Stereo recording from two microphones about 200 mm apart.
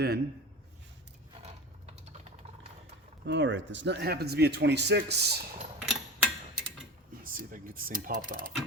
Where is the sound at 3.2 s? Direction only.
60° right (ahead or behind).